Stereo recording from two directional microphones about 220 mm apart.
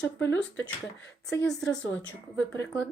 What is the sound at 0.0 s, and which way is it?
Speech, 10° left (ahead or behind).